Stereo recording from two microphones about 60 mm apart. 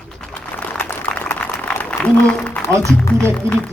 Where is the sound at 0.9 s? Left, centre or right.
Left.